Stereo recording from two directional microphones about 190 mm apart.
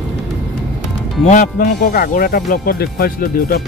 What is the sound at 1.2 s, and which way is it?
Speech, 40° left (ahead or behind).